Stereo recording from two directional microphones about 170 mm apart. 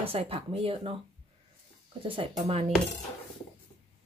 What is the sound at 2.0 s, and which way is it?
Speech, 30° right (ahead or behind).